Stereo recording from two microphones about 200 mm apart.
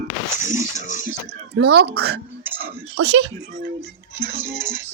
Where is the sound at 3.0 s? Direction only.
60° right (ahead or behind).